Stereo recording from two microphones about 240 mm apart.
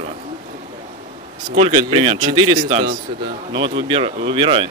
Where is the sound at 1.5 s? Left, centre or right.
Right.